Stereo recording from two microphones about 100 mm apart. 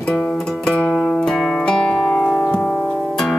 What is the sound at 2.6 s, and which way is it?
Music, 20° left (ahead or behind).